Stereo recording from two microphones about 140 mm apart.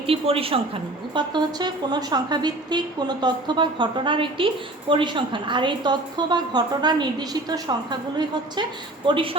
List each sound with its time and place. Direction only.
0.1 s a woman's voice: 40° right (ahead or behind)
1.1 s a woman's voice: 30° right (ahead or behind)
9.0 s a woman's voice: 40° right (ahead or behind)